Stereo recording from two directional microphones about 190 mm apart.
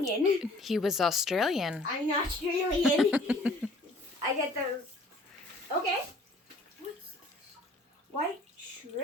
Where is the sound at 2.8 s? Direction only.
Centre (ahead or behind).